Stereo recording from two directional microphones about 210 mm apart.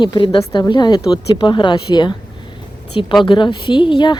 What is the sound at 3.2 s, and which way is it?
Speech, 20° left (ahead or behind).